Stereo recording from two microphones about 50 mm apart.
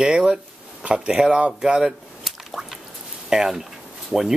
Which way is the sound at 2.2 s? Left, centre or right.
Centre.